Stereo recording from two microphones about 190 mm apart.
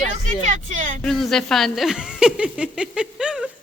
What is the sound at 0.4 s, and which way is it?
Speech, 40° right (ahead or behind).